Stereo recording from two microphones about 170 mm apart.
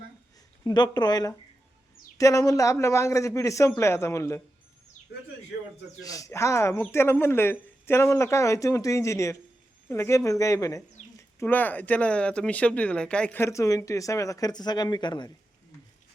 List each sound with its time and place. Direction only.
0.6 s speech: 25° left (ahead or behind)
6.0 s speech: 20° left (ahead or behind)